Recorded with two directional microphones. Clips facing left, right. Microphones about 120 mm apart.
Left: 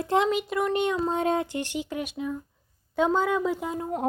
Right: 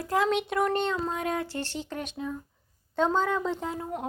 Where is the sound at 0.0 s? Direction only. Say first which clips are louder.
Left 3 dB; 25° left (ahead or behind).